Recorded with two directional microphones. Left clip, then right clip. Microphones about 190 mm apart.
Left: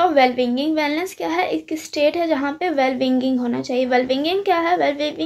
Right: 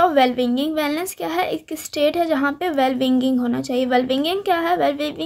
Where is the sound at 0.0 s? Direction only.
35° right (ahead or behind).